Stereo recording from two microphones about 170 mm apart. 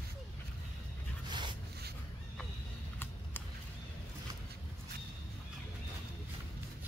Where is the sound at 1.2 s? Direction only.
25° right (ahead or behind).